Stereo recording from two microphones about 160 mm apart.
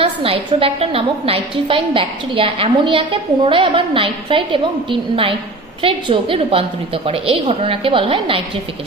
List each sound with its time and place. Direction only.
0.0 s a woman's voice: 35° right (ahead or behind)
5.8 s a woman's voice: 35° right (ahead or behind)